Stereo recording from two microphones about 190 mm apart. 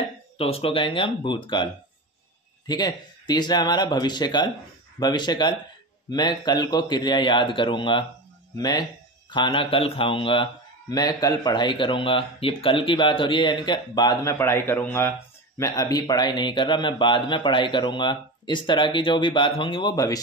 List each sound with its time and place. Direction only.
0.4 s a man's voice: 30° left (ahead or behind)